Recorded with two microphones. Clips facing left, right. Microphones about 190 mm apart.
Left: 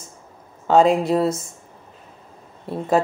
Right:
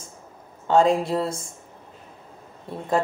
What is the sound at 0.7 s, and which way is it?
Speech, 20° left (ahead or behind).